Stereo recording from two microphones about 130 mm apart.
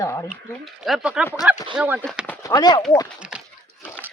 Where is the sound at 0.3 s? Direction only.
Centre (ahead or behind).